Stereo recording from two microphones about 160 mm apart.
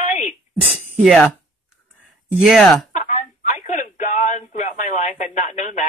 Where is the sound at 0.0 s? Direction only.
50° left (ahead or behind).